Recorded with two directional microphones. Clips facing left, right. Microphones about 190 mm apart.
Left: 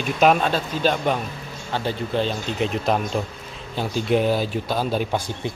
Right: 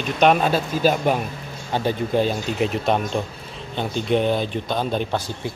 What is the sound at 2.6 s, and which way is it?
Speech, centre (ahead or behind).